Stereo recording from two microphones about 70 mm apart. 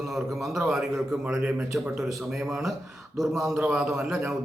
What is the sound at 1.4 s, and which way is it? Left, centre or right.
Speech, right.